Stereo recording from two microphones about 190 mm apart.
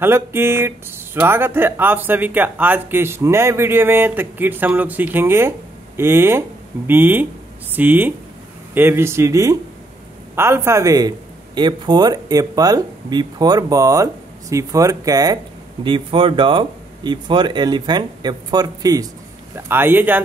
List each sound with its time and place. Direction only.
0.0 s speech: 15° right (ahead or behind)